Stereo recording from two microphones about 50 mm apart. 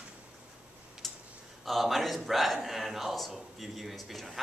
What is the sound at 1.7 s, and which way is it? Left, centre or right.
A man's voice, centre.